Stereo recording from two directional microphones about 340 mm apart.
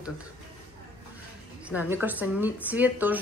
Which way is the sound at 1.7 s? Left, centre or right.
Centre.